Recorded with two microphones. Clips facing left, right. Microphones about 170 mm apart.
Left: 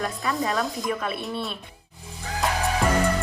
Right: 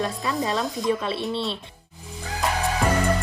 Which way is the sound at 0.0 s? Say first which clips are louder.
Right 1 dB; 20° right (ahead or behind).